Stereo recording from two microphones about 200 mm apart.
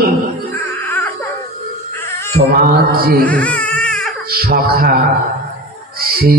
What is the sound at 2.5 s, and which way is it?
Speech, 45° right (ahead or behind).